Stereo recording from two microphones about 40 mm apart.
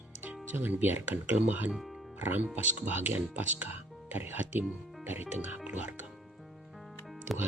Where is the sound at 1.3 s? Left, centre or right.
Right.